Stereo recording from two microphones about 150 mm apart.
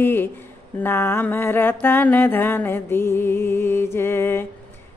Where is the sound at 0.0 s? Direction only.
15° left (ahead or behind).